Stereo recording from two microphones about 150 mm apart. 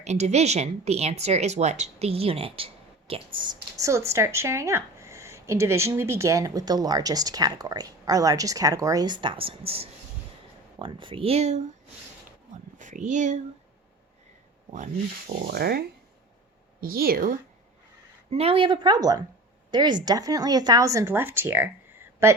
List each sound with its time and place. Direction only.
0.0 s speech: 50° right (ahead or behind)
3.3 s a woman's voice: 30° right (ahead or behind); by 11.6 s 45° right (ahead or behind)
12.8 s speech: 55° right (ahead or behind)
15.4 s speech: 90° right
16.8 s a woman's voice: 80° right
18.3 s a woman's voice: 40° right (ahead or behind); by 22.4 s 15° right (ahead or behind)